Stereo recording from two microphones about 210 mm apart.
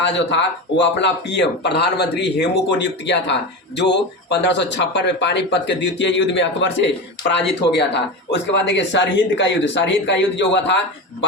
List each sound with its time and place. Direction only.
0.0 s speech: 55° left (ahead or behind)